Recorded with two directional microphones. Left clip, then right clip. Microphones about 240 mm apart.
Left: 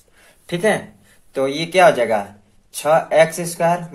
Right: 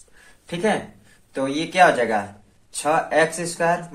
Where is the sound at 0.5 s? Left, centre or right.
Left.